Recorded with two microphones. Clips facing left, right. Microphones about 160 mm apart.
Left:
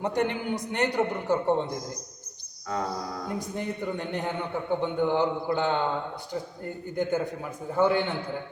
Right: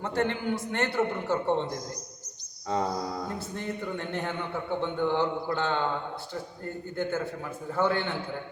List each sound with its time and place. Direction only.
0.0 s a man's voice: 15° left (ahead or behind)
2.7 s music: 25° right (ahead or behind)
3.2 s a man's voice: 15° left (ahead or behind)